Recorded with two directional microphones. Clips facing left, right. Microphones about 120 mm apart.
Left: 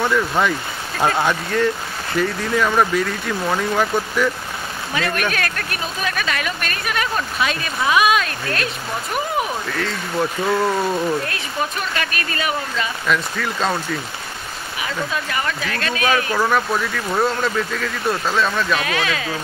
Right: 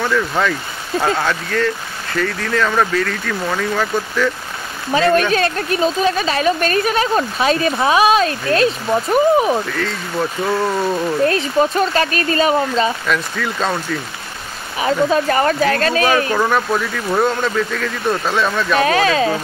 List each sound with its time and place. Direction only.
0.1 s speech: 10° left (ahead or behind)
4.9 s speech: 30° right (ahead or behind)
9.8 s speech: centre (ahead or behind)
11.2 s speech: 35° right (ahead or behind)
13.0 s speech: centre (ahead or behind)
14.8 s speech: 35° right (ahead or behind)
16.3 s speech: centre (ahead or behind)
18.8 s speech: 35° right (ahead or behind)